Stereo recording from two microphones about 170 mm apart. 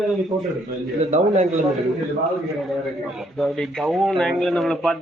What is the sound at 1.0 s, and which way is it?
Speech, 45° right (ahead or behind).